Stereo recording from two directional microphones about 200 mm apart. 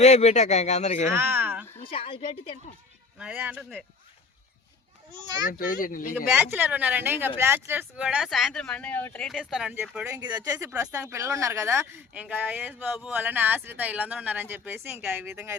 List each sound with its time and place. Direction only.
0.0 s speech: 35° left (ahead or behind)
1.1 s a sound: 10° right (ahead or behind)
1.8 s a woman's voice: 25° left (ahead or behind)
3.2 s speech: 5° right (ahead or behind)
5.5 s speech: 45° left (ahead or behind)
6.2 s speech: 5° right (ahead or behind)
10.2 s speech: 20° right (ahead or behind)